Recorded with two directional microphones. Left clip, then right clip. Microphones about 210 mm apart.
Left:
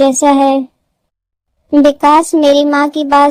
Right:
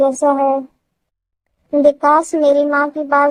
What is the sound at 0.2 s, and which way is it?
Speech, 40° left (ahead or behind).